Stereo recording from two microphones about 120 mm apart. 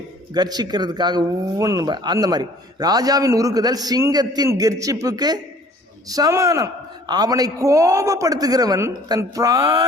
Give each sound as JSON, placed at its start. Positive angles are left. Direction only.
{"t": 0.3, "sound": "a man's voice", "side_deg": -35}